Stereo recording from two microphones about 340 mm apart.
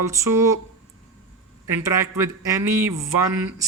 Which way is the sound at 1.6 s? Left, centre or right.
Centre.